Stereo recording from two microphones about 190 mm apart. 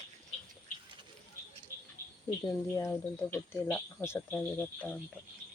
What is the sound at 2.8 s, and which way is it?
Speech, 10° left (ahead or behind).